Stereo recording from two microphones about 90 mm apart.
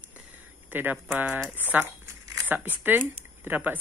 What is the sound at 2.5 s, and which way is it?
Speech, 20° right (ahead or behind).